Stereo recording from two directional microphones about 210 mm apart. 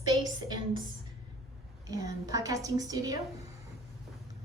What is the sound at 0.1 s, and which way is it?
Speech, 20° right (ahead or behind).